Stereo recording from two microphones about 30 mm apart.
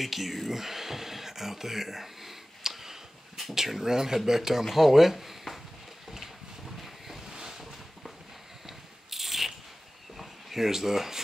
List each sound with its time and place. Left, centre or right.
0.0 s speech: centre
6.1 s boat: centre
7.3 s boat: right
8.6 s a sound: centre